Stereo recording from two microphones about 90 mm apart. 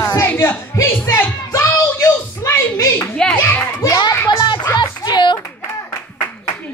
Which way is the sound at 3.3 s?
20° left (ahead or behind).